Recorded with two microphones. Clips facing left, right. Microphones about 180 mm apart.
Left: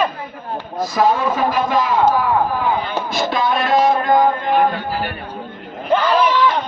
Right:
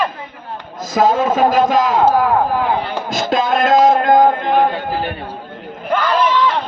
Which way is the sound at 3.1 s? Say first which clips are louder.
Right 3 dB; 45° right (ahead or behind).